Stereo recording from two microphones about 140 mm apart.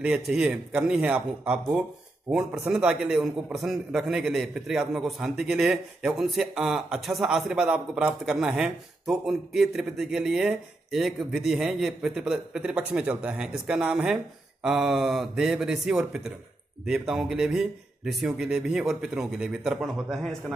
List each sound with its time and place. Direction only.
0.0 s a man's voice: 10° right (ahead or behind)